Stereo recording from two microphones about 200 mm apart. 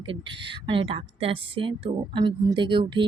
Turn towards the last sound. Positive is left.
turn(degrees=-25)  # may be behind; listen again after turning